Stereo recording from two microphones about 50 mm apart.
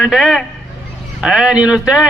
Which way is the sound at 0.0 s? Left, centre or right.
Centre.